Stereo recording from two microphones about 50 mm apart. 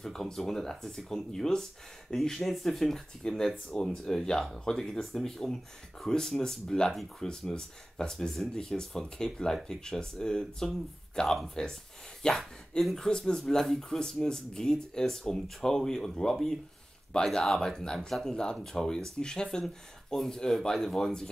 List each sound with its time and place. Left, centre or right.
0.0 s speech: centre
12.4 s speech: centre